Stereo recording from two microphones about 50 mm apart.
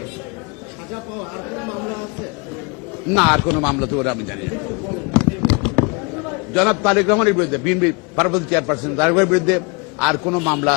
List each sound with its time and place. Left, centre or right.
1.2 s speech: centre
3.1 s a man's voice: centre